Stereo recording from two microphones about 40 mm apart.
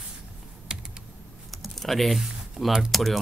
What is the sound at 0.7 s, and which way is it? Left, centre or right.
Computer keyboard, centre.